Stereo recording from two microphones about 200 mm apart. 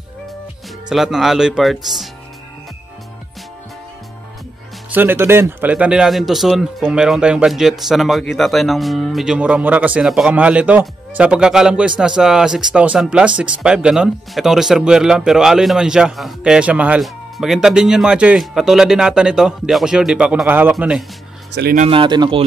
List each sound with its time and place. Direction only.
0.8 s speech: centre (ahead or behind)
4.9 s speech: 10° right (ahead or behind)
21.5 s speech: 50° right (ahead or behind)
21.8 s speech: 25° right (ahead or behind)